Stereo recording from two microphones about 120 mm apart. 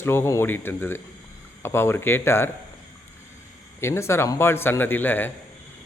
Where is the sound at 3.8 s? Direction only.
20° left (ahead or behind).